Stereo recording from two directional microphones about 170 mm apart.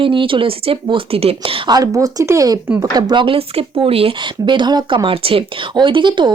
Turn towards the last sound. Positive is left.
turn(degrees=-30)  # may be behind; listen again after turning